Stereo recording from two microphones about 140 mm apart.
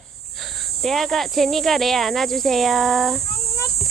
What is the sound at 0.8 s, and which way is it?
Speech, centre (ahead or behind).